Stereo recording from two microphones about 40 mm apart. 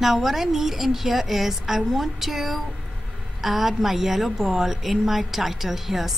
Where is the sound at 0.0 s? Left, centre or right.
Centre.